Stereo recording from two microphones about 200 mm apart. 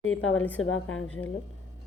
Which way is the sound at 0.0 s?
90° left.